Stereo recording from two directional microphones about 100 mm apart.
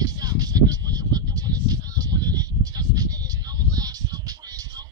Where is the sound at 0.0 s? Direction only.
40° right (ahead or behind).